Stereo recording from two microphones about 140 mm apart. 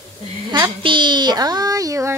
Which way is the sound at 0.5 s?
35° right (ahead or behind).